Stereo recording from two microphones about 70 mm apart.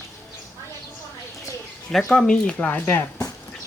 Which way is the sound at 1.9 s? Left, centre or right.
Centre.